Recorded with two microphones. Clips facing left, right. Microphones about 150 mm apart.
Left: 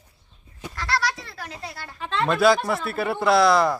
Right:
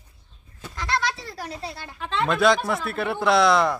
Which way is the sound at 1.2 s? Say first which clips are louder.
Right 3 dB; 35° right (ahead or behind).